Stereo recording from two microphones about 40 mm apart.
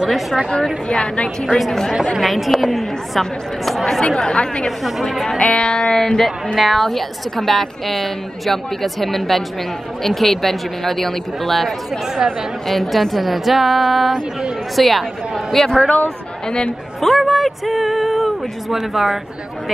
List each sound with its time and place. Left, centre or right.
0.8 s speech: left
2.1 s a woman's voice: centre
4.0 s speech: centre
4.6 s a woman's voice: centre
5.4 s speech: left
5.9 s a woman's voice: centre
12.2 s speech: centre
12.6 s a woman's voice: centre
15.6 s speech: centre
17.0 s a woman's voice: centre